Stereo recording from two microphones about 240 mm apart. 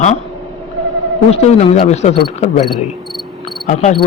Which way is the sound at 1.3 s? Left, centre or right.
Left.